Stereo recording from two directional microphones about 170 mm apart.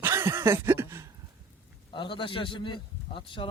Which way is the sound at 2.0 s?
30° left (ahead or behind).